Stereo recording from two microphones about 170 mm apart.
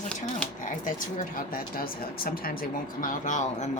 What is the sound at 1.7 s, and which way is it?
Speech, 60° left (ahead or behind).